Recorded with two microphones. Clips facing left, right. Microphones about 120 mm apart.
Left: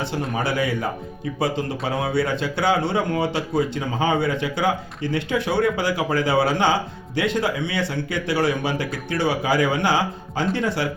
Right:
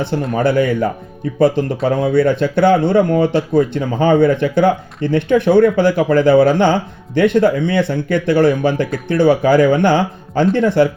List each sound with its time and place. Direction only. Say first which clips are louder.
0.0 s speech: right 8 dB; 55° right (ahead or behind)